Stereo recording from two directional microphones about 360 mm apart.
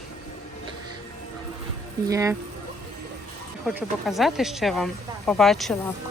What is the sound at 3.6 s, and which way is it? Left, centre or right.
Speech, centre.